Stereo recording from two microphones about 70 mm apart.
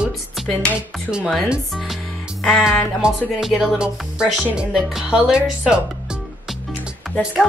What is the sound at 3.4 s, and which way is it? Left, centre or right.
Music, centre.